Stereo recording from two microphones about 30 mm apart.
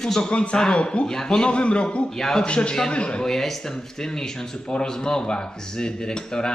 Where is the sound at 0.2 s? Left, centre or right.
Left.